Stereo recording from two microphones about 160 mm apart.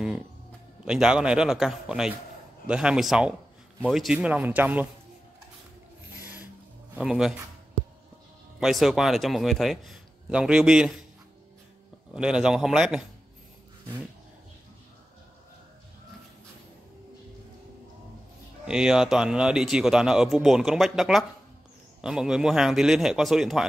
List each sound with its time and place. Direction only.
0.8 s speech: 5° right (ahead or behind)
7.0 s speech: 5° right (ahead or behind)
8.5 s speech: centre (ahead or behind)
12.1 s speech: 5° right (ahead or behind)
18.7 s speech: 5° right (ahead or behind)